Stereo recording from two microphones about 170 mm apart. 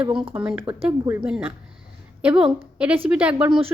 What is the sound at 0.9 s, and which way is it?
Speech, 10° right (ahead or behind).